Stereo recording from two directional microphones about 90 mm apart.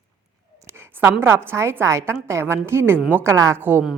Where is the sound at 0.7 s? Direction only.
25° right (ahead or behind).